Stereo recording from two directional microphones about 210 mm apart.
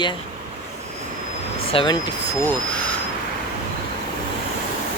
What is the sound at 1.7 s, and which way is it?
Speech, 25° left (ahead or behind).